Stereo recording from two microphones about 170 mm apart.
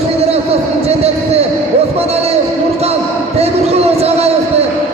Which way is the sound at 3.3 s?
35° right (ahead or behind).